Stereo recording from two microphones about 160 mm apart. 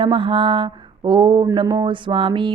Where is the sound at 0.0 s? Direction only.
30° right (ahead or behind).